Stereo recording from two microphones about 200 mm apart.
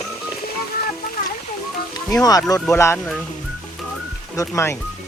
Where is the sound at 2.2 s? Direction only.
20° left (ahead or behind).